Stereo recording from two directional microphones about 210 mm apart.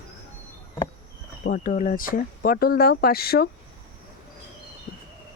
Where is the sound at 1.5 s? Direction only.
40° left (ahead or behind).